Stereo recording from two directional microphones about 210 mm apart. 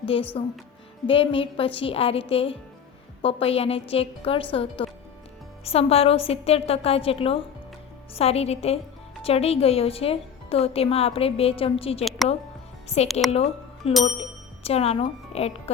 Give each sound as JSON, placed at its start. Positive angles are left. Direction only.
{"t": 0.1, "sound": "a woman's voice", "side_deg": 25}
{"t": 13.3, "sound": "speech", "side_deg": 30}